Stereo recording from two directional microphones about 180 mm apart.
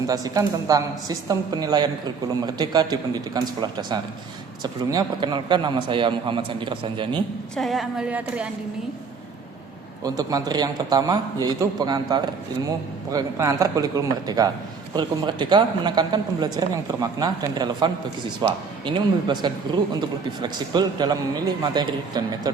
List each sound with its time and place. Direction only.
0.1 s a man's voice: 20° right (ahead or behind)
7.5 s a woman's voice: centre (ahead or behind)
10.0 s a man's voice: 20° right (ahead or behind)